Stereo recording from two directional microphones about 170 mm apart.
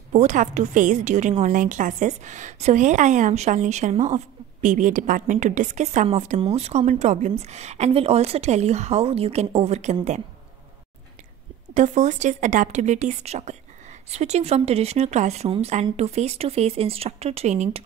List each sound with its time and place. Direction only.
0.1 s a woman's voice: 45° right (ahead or behind)
11.7 s a woman's voice: 45° right (ahead or behind)